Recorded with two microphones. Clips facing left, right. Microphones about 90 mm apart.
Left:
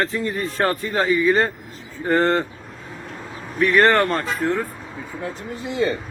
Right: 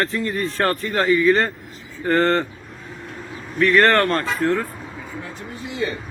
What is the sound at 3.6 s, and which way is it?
Speech, 10° left (ahead or behind).